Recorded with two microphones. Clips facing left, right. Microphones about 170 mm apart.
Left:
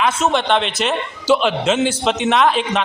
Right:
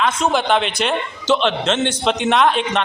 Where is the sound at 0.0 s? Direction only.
Centre (ahead or behind).